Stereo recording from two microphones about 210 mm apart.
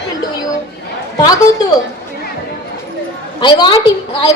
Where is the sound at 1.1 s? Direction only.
20° left (ahead or behind).